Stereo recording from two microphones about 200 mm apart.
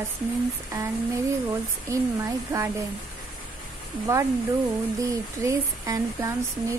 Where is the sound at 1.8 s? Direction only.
15° right (ahead or behind).